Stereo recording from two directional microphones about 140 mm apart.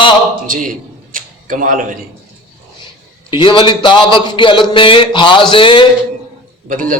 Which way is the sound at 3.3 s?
35° left (ahead or behind).